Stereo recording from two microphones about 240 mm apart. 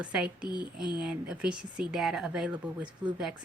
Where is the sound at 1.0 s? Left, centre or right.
Centre.